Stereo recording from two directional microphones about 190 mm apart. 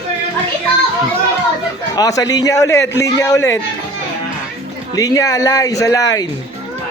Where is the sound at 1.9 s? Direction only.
20° left (ahead or behind).